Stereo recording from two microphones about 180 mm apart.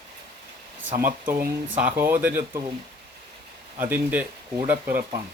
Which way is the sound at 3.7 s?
10° right (ahead or behind).